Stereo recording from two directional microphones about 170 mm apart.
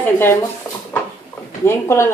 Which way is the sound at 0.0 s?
15° left (ahead or behind).